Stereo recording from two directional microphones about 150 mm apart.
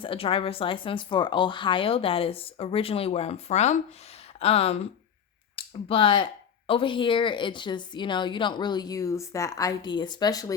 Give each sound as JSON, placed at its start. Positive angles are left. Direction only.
{"t": 0.0, "sound": "a woman's voice", "side_deg": 35}